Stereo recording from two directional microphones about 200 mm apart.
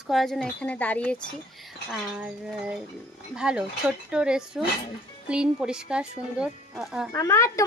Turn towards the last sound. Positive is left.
turn(degrees=15)  # may be behind; listen again after turning